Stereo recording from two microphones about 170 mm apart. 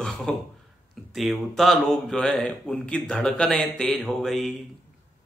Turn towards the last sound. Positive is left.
turn(degrees=0)  # may be behind; listen again after turning